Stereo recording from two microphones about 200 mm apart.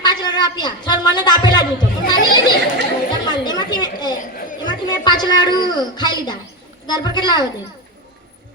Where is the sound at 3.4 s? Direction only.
20° left (ahead or behind).